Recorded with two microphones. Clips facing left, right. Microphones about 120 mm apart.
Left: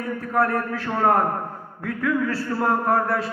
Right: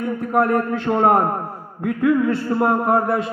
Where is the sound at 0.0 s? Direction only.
20° right (ahead or behind).